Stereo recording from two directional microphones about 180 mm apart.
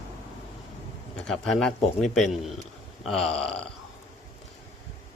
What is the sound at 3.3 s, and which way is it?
Speech, 35° left (ahead or behind).